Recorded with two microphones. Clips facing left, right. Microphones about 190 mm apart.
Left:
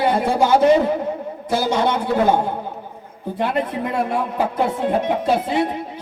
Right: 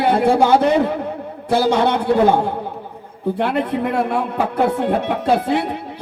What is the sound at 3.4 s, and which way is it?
Speech, 65° right (ahead or behind).